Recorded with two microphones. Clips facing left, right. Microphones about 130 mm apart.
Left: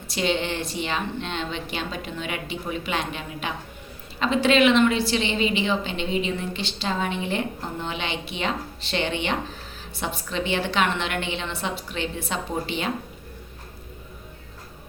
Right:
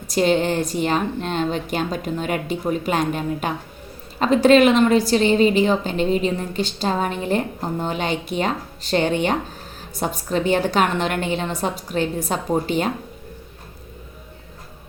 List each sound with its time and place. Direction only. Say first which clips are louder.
0.1 s a woman's voice: right 7 dB; 45° right (ahead or behind)